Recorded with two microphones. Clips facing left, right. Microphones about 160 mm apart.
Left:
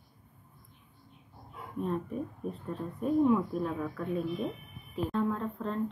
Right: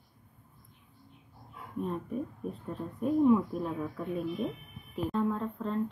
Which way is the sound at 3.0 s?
5° right (ahead or behind).